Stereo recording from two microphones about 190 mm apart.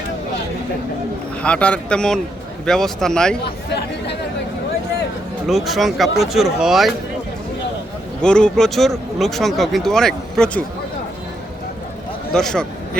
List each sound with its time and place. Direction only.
1.4 s speech: 5° left (ahead or behind)
3.4 s speech: 60° left (ahead or behind)
5.5 s speech: centre (ahead or behind)
8.2 s speech: 5° left (ahead or behind)
12.3 s speech: 5° left (ahead or behind)